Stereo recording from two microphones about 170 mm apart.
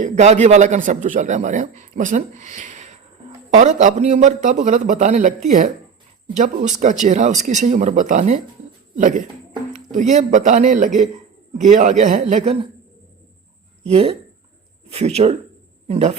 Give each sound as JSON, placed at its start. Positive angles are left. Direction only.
{"t": 0.0, "sound": "a man's voice", "side_deg": -45}
{"t": 13.8, "sound": "speech", "side_deg": -35}